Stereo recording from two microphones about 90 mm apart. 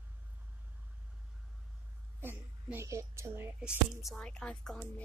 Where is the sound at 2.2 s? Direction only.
25° right (ahead or behind).